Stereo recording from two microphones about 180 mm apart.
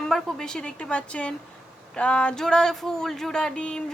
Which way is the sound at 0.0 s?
5° left (ahead or behind).